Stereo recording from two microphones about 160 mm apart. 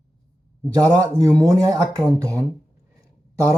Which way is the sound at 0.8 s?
20° right (ahead or behind).